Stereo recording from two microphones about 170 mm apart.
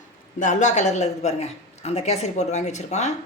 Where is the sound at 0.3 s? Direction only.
45° left (ahead or behind).